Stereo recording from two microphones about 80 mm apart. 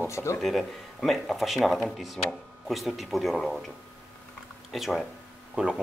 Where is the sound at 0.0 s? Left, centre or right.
Left.